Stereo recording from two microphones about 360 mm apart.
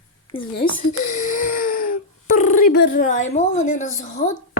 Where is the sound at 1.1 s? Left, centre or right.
Left.